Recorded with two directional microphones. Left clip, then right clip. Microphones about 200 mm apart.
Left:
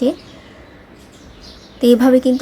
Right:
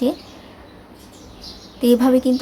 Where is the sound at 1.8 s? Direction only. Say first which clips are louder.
Left 4 dB; 15° left (ahead or behind).